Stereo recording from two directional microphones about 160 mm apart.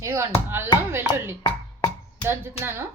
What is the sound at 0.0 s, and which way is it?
Speech, 15° right (ahead or behind).